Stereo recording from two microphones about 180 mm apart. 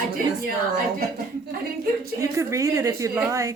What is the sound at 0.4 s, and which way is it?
Speech, 55° right (ahead or behind).